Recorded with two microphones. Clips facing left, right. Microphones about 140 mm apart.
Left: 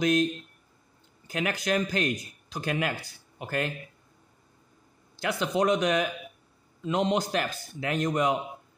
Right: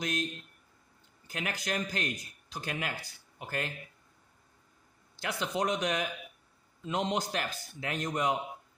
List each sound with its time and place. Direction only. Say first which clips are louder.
0.0 s a man's voice: left 10 dB; 90° left
5.2 s a man's voice: left 6 dB; 90° left